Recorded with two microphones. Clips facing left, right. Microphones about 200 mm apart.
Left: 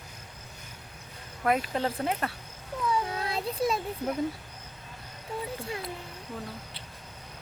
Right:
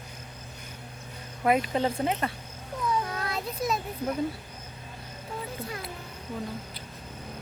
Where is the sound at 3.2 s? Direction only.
30° left (ahead or behind).